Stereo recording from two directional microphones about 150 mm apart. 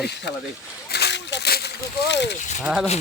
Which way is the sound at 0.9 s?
90° left.